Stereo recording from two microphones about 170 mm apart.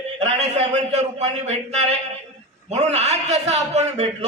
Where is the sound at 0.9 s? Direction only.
40° right (ahead or behind).